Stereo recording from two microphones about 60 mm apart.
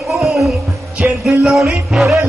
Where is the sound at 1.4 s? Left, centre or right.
Centre.